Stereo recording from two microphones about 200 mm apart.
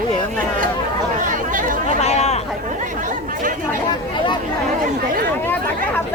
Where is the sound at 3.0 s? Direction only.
40° right (ahead or behind).